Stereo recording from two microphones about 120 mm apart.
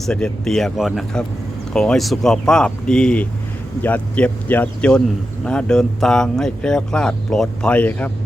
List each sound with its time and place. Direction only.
0.0 s speech: 5° left (ahead or behind)